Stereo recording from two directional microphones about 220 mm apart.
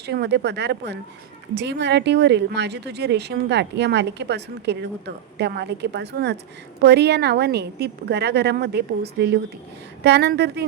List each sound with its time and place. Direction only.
0.0 s speech: 50° right (ahead or behind)